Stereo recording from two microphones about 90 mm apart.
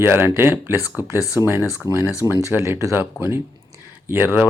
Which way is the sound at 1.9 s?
40° right (ahead or behind).